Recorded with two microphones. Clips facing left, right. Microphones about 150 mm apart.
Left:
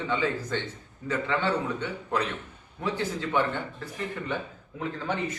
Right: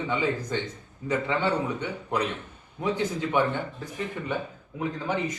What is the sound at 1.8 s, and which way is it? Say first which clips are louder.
A man's voice: right 1 dB; 15° right (ahead or behind).